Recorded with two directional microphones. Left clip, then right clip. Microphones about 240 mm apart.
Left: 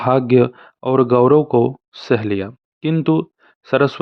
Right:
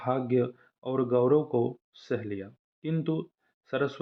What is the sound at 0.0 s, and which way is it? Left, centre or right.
Speech, left.